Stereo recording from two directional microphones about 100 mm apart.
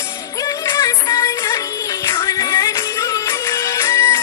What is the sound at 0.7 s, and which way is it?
Music, 35° left (ahead or behind).